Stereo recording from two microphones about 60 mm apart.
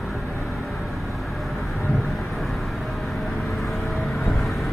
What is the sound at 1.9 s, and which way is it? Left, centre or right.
Vehicle, centre.